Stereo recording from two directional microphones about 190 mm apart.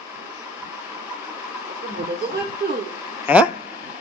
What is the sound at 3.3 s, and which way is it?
Speech, 10° right (ahead or behind).